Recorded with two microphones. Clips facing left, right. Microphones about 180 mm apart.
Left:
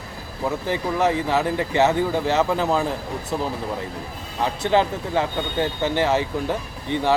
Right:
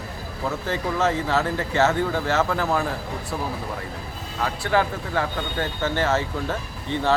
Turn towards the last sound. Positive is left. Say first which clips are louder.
# left 2 dB
turn(degrees=15)  # may be behind; listen again after turning